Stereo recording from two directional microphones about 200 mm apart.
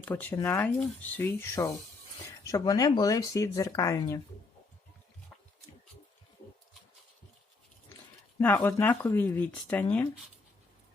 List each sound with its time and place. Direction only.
0.0 s speech: 10° left (ahead or behind)
8.4 s speech: 10° left (ahead or behind)